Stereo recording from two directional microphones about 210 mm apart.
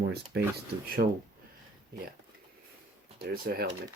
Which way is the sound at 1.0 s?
40° right (ahead or behind).